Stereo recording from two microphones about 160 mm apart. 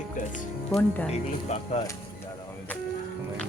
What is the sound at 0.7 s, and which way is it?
Speech, 10° left (ahead or behind).